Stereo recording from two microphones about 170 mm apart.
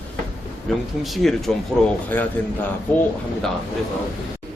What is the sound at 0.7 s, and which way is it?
Speech, centre (ahead or behind).